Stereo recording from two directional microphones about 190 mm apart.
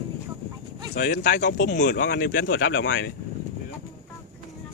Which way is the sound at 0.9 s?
55° left (ahead or behind).